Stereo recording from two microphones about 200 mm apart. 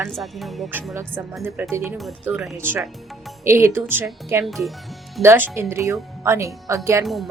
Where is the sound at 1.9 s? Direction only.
Centre (ahead or behind).